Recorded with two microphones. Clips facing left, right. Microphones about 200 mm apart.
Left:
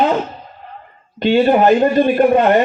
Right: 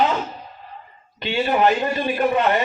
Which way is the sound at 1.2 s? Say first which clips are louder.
Left 7 dB; 50° left (ahead or behind).